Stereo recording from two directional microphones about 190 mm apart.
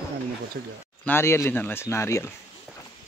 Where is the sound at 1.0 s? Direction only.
15° left (ahead or behind).